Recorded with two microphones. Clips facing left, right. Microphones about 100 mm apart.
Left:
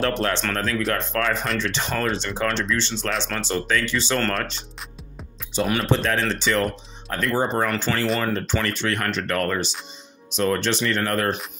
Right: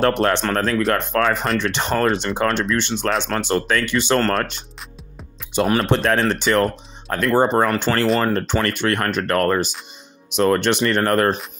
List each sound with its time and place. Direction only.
0.0 s speech: 55° right (ahead or behind)
0.5 s speech: 40° right (ahead or behind)
0.9 s speech: 55° right (ahead or behind)